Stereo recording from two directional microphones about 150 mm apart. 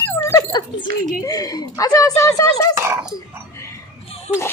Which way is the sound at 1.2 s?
25° left (ahead or behind).